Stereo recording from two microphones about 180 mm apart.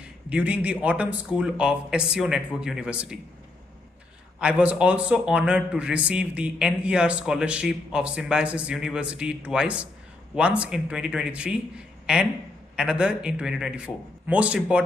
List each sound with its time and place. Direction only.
0.3 s a man's voice: 10° right (ahead or behind)
4.4 s a man's voice: 5° right (ahead or behind)